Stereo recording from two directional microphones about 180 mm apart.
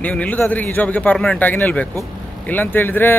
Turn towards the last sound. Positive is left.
turn(degrees=10)  # may be behind; listen again after turning